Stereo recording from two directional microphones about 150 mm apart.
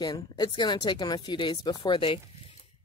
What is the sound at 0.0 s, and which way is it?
Speech, 30° left (ahead or behind).